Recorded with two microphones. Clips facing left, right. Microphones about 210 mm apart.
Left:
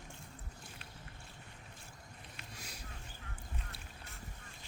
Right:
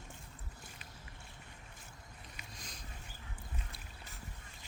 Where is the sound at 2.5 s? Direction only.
10° left (ahead or behind).